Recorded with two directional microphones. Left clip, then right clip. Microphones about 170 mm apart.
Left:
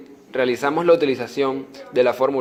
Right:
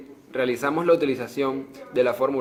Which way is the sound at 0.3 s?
20° left (ahead or behind).